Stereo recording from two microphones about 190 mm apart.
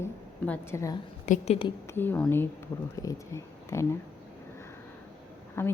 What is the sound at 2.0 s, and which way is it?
A woman's voice, 10° left (ahead or behind).